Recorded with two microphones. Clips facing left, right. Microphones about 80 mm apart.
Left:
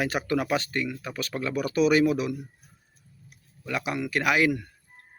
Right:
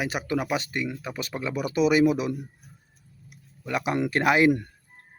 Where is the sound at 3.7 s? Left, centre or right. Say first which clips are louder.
Right 3 dB; right.